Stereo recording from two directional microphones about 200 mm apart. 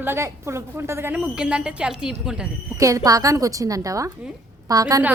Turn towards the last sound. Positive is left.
turn(degrees=-15)  # may be behind; listen again after turning